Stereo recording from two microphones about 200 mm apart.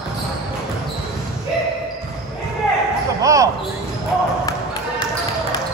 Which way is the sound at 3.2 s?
15° right (ahead or behind).